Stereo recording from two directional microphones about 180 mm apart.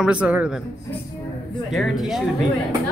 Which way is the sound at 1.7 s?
Centre (ahead or behind).